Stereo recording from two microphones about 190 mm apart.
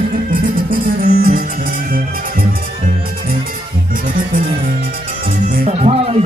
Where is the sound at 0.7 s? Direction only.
50° right (ahead or behind).